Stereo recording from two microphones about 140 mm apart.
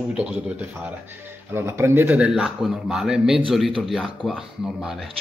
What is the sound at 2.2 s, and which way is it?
Speech, 5° right (ahead or behind).